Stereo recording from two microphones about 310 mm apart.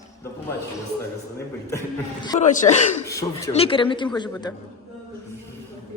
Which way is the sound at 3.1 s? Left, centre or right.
Centre.